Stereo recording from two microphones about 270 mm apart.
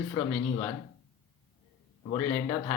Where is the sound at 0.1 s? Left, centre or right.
Centre.